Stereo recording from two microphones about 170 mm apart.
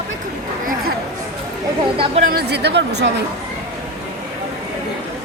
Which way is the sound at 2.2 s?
70° right (ahead or behind).